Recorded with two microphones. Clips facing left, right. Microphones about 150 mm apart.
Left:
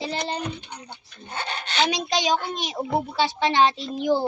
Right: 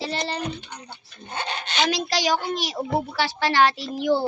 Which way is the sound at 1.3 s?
20° right (ahead or behind).